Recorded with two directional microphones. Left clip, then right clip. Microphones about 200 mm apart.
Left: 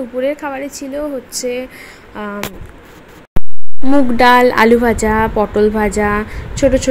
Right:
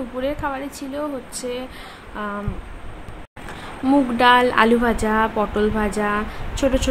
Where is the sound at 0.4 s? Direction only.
10° left (ahead or behind).